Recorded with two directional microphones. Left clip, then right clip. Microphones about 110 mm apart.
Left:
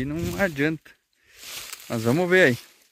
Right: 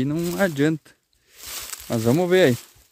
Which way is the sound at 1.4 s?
25° right (ahead or behind).